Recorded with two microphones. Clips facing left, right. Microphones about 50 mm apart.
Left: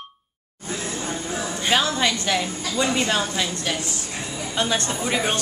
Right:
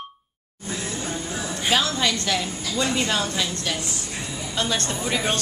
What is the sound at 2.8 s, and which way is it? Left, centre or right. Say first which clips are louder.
A woman's voice: left 2 dB; centre.